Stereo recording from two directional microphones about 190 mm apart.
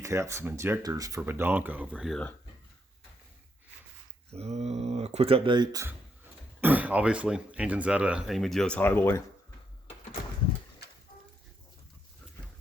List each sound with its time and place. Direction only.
0.0 s speech: 15° right (ahead or behind); by 2.3 s centre (ahead or behind)
4.3 s speech: 35° right (ahead or behind)
6.6 s speech: 10° right (ahead or behind); by 9.2 s 10° left (ahead or behind)